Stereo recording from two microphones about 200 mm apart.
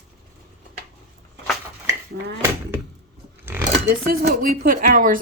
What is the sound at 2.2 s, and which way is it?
Speech, 55° right (ahead or behind).